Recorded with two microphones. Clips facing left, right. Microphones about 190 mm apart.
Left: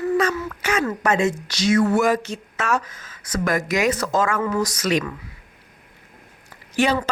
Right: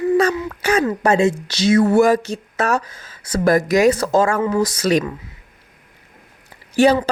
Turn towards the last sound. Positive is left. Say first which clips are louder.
# right 6 dB
turn(degrees=-35)  # may be behind; listen again after turning